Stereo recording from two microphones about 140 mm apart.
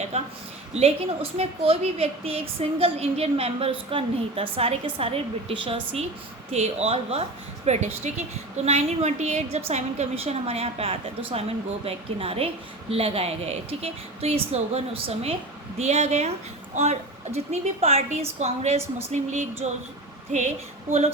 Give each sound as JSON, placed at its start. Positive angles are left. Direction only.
{"t": 0.1, "sound": "a woman's voice", "side_deg": -45}